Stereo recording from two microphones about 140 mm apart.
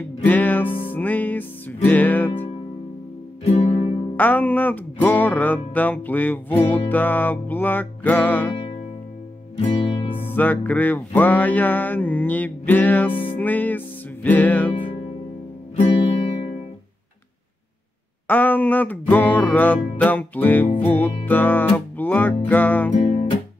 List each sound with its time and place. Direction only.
0.2 s music: 10° left (ahead or behind)
3.4 s music: 50° left (ahead or behind)
4.2 s music: 10° left (ahead or behind)
9.6 s music: 45° left (ahead or behind)
10.2 s music: 10° left (ahead or behind)
18.2 s music: 10° left (ahead or behind)